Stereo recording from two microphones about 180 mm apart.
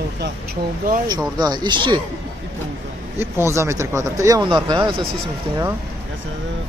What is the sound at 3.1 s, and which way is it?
Speech, 15° right (ahead or behind).